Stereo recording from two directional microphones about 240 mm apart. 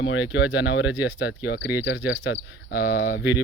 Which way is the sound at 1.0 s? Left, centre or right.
Centre.